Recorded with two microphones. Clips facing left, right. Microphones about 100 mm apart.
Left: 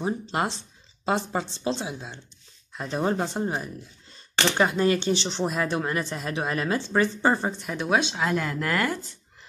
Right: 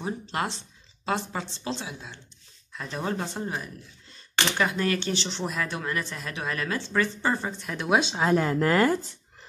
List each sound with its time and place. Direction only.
0.0 s speech: 25° left (ahead or behind)
7.6 s speech: 5° left (ahead or behind)
8.0 s speech: 30° right (ahead or behind)